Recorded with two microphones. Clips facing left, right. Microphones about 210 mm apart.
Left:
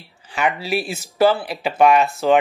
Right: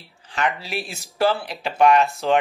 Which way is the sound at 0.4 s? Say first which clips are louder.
Left 4 dB; 5° left (ahead or behind).